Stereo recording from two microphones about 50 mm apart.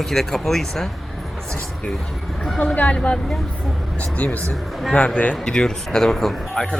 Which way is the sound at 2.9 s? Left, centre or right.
Left.